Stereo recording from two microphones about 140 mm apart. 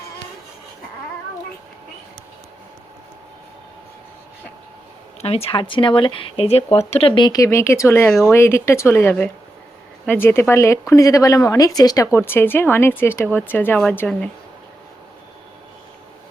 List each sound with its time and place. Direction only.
5.2 s speech: 45° left (ahead or behind)
7.2 s speech: 25° left (ahead or behind); by 14.2 s 5° left (ahead or behind)